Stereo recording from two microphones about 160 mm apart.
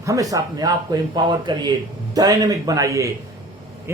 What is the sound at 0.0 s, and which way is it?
A man's voice, 20° right (ahead or behind).